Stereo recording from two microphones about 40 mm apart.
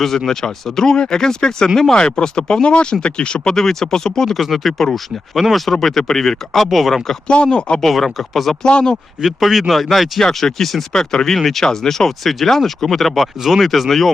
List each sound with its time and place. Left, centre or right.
0.3 s speech: centre
4.4 s speech: centre
6.6 s speech: centre
7.3 s speech: left
7.8 s speech: centre
8.6 s speech: left
9.2 s speech: centre
10.9 s speech: centre
11.3 s speech: centre